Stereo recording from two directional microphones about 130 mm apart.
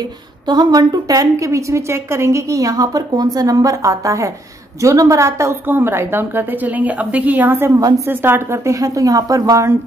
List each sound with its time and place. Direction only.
0.5 s a woman's voice: 30° right (ahead or behind)